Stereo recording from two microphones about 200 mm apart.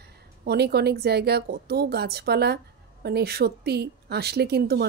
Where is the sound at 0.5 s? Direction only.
55° right (ahead or behind).